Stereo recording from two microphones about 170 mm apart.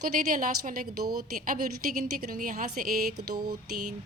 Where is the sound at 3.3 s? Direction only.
25° right (ahead or behind).